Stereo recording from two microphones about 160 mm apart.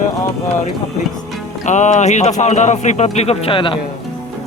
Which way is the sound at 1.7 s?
50° left (ahead or behind).